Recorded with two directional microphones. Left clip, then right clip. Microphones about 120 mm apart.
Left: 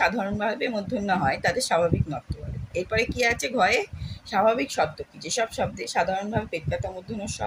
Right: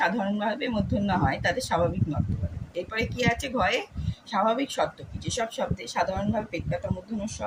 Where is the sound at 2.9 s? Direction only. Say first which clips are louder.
Left 3 dB; 50° left (ahead or behind).